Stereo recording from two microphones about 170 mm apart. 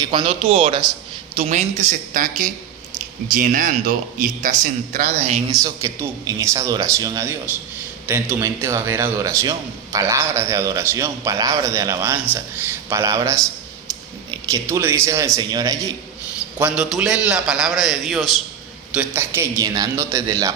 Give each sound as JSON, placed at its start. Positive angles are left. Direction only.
{"t": 0.0, "sound": "speech", "side_deg": -30}
{"t": 1.4, "sound": "a man's voice", "side_deg": -45}
{"t": 5.6, "sound": "a man's voice", "side_deg": -20}
{"t": 16.6, "sound": "a man's voice", "side_deg": -5}
{"t": 18.9, "sound": "a man's voice", "side_deg": -15}